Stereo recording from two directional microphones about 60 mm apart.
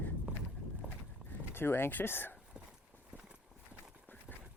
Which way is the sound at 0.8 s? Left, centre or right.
Right.